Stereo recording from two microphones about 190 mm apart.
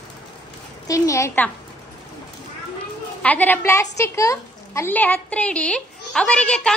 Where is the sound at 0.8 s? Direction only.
15° left (ahead or behind).